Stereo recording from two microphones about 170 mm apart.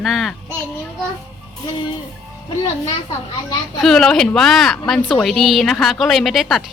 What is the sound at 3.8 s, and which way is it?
Speech, 5° left (ahead or behind).